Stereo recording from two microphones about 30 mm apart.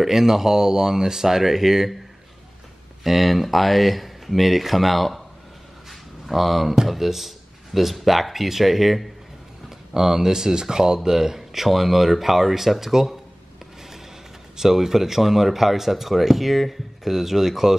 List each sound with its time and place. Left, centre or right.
0.0 s speech: centre
3.0 s speech: centre
5.9 s a sound: centre
6.9 s speech: centre
9.9 s speech: centre
14.6 s speech: centre